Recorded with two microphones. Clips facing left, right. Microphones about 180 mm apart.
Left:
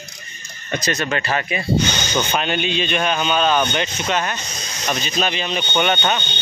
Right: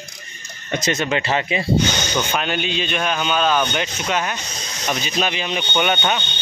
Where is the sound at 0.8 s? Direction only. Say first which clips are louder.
Right 2 dB; 20° right (ahead or behind).